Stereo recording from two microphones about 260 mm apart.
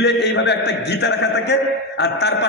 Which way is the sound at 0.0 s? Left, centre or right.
Left.